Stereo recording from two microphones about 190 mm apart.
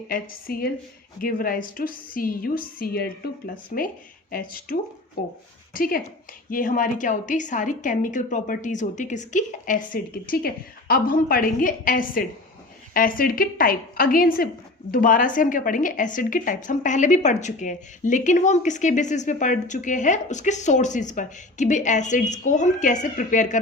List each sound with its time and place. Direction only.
0.1 s a woman's voice: 50° left (ahead or behind)